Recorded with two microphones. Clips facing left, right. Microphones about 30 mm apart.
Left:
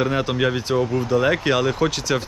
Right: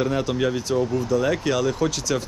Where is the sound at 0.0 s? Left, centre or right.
Left.